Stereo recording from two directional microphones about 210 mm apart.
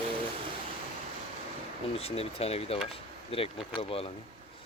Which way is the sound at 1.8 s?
30° left (ahead or behind).